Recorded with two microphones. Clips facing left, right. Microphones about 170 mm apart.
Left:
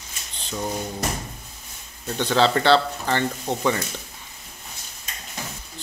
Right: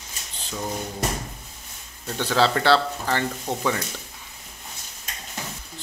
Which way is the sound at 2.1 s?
5° right (ahead or behind).